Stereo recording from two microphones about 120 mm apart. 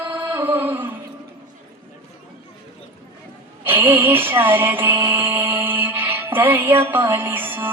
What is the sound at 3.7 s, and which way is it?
Music, 15° right (ahead or behind).